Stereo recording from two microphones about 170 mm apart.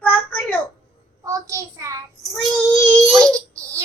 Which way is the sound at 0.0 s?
10° left (ahead or behind).